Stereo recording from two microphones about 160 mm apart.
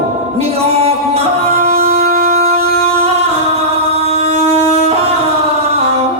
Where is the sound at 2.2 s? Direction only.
40° right (ahead or behind).